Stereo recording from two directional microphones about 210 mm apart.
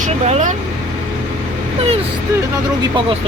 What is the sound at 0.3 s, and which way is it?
Speech, 35° right (ahead or behind).